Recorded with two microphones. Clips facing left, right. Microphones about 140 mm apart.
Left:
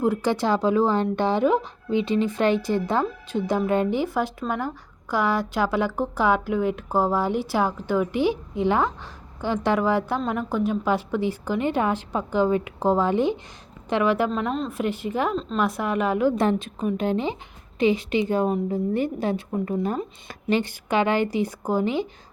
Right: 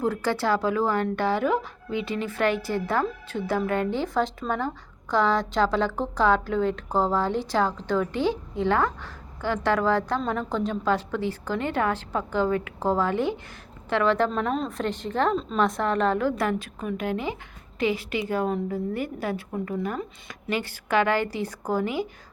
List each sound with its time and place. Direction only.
0.0 s speech: 15° left (ahead or behind)
14.3 s a woman's voice: centre (ahead or behind); by 22.0 s 20° left (ahead or behind)